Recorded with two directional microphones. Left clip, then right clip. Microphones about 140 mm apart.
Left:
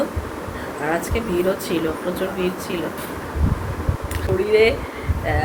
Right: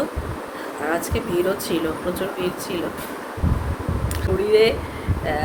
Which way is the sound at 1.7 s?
25° right (ahead or behind).